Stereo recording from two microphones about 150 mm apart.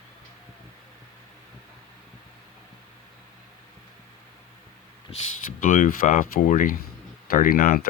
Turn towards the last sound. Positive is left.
turn(degrees=75)  # may be behind; listen again after turning